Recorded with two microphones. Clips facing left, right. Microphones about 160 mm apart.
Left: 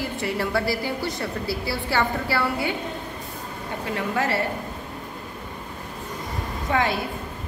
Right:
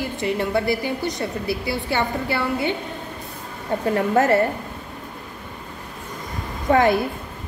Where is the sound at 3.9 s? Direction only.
45° right (ahead or behind).